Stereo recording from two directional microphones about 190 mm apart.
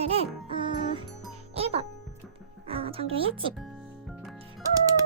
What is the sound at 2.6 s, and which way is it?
Speech, 30° right (ahead or behind).